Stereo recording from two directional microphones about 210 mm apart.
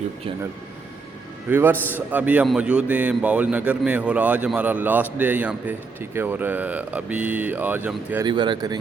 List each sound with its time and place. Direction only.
1.5 s a man's voice: 10° right (ahead or behind)
8.3 s speech: 20° right (ahead or behind)